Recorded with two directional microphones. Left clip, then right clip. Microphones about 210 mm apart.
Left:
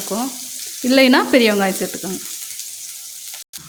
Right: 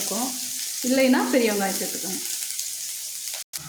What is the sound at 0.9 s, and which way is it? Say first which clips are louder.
Frying: left 8 dB; 50° left (ahead or behind).